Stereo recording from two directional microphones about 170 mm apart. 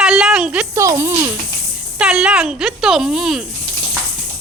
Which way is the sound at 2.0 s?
5° right (ahead or behind).